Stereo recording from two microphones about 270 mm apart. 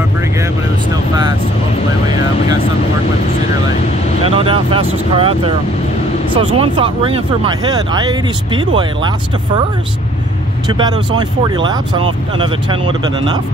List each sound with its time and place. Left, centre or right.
4.3 s speech: centre
10.7 s speech: centre